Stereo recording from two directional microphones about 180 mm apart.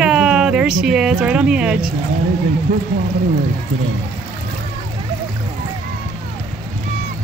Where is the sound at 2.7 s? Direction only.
50° right (ahead or behind).